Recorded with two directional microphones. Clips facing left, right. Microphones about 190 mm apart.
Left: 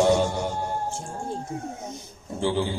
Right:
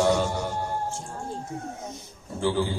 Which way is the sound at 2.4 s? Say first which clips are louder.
Even; 20° left (ahead or behind).